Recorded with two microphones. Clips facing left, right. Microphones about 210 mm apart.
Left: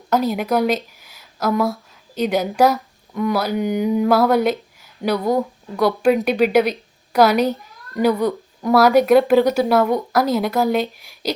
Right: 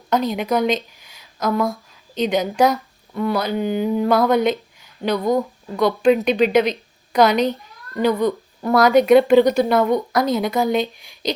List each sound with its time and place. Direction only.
0.1 s a woman's voice: 5° left (ahead or behind)
8.6 s speech: centre (ahead or behind)